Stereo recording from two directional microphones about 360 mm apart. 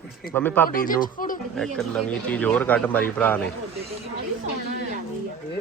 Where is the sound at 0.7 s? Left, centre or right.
Left.